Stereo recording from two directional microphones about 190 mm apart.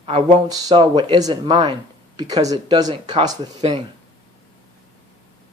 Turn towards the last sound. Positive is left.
turn(degrees=-25)  # may be behind; listen again after turning